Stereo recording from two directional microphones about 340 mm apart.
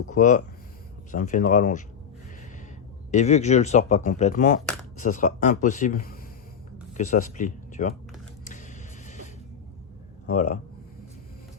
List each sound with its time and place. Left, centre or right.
0.1 s speech: left
3.1 s speech: centre
8.4 s music: left
10.2 s speech: left